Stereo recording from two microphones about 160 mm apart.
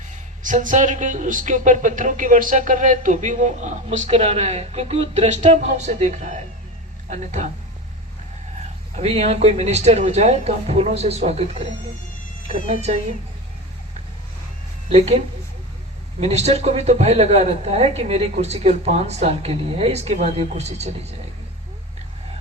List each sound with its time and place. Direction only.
0.4 s speech: 55° right (ahead or behind)
9.0 s speech: 40° right (ahead or behind)
14.8 s speech: 40° right (ahead or behind)
16.2 s speech: 45° right (ahead or behind)